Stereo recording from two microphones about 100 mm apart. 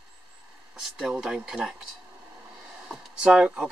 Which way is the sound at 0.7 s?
10° right (ahead or behind).